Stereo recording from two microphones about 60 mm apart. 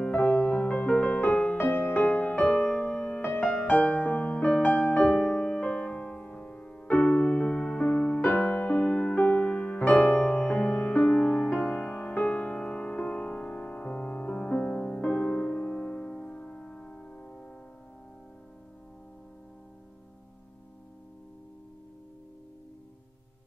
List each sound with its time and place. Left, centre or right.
0.1 s music: centre
1.6 s music: left
3.2 s music: left
3.4 s music: left
12.3 s music: centre